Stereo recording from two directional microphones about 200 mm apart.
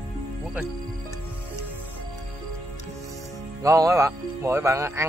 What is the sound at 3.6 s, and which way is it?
Speech, 15° right (ahead or behind).